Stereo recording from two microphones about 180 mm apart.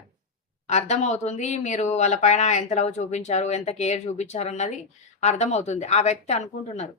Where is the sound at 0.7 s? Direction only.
40° left (ahead or behind).